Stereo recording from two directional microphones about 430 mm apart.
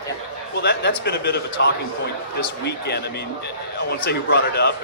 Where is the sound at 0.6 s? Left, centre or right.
Left.